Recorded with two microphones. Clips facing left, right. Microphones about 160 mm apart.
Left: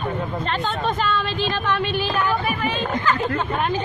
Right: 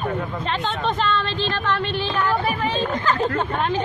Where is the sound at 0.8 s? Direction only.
5° left (ahead or behind).